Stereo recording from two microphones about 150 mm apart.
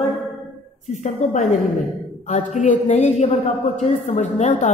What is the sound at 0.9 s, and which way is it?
A woman's voice, 55° left (ahead or behind).